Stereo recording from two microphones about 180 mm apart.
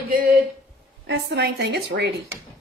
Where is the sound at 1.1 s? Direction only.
70° right (ahead or behind).